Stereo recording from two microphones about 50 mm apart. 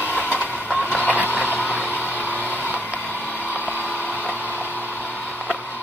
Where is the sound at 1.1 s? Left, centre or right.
Right.